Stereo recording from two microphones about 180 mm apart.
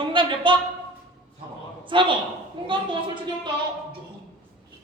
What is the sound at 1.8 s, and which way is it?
Speech, 25° right (ahead or behind).